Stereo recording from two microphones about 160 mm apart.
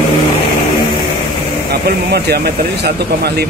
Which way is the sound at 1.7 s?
90° right.